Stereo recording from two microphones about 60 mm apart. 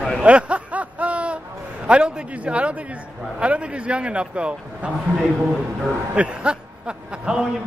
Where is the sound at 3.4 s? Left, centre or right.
Right.